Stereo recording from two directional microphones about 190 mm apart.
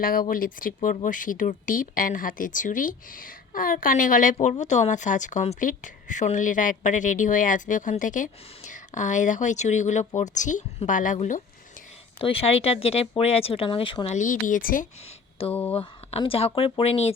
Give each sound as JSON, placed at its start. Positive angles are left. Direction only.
{"t": 0.0, "sound": "speech", "side_deg": 50}
{"t": 12.2, "sound": "speech", "side_deg": 30}
{"t": 15.4, "sound": "speech", "side_deg": 30}